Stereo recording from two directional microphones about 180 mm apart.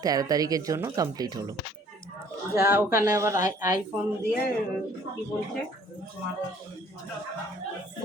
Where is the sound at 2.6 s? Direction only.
15° right (ahead or behind).